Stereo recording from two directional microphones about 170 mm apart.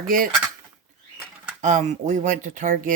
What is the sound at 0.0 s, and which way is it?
Speech, 55° right (ahead or behind).